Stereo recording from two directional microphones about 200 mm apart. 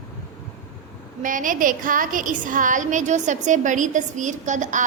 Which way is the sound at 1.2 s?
40° right (ahead or behind).